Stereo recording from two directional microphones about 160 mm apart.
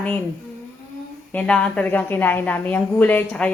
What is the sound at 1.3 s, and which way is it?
A woman's voice, 10° left (ahead or behind).